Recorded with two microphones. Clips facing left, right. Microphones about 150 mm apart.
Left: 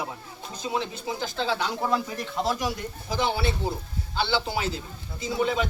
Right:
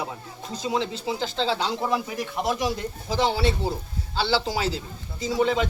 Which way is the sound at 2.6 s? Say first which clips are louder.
Right 3 dB; 25° right (ahead or behind).